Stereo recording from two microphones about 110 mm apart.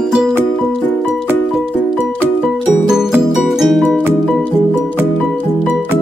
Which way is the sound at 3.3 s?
Centre (ahead or behind).